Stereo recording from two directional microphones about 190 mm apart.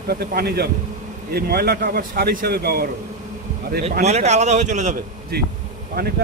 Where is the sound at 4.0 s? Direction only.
35° right (ahead or behind).